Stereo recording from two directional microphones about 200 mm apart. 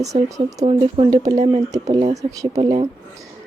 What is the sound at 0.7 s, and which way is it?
Speech, 30° right (ahead or behind).